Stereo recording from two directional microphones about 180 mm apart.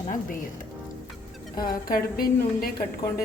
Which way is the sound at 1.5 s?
55° left (ahead or behind).